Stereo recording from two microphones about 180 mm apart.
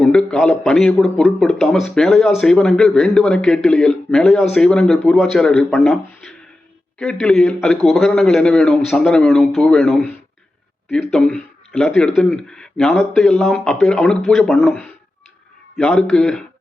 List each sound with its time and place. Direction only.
0.0 s a man's voice: centre (ahead or behind)